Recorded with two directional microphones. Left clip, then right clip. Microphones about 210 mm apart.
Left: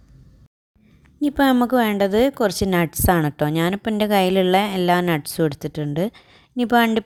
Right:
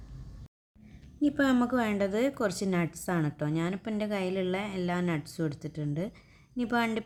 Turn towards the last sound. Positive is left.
turn(degrees=35)  # may be behind; listen again after turning